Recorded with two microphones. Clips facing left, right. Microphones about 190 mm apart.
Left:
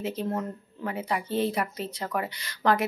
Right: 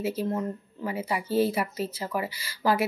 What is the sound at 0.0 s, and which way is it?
Speech, 5° right (ahead or behind).